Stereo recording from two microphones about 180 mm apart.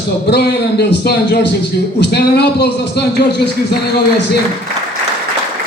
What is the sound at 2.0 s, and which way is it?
Speech, 65° left (ahead or behind).